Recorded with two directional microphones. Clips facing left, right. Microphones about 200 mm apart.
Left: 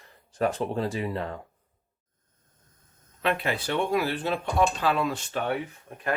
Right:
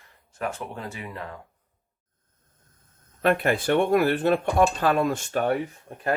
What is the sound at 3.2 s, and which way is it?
Speech, 50° right (ahead or behind).